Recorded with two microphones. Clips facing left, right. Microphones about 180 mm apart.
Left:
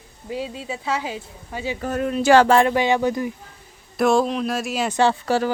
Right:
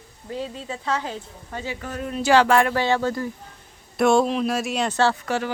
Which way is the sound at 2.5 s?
25° left (ahead or behind).